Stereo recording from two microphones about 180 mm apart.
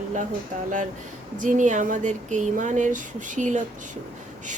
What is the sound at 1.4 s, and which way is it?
Speech, 45° right (ahead or behind).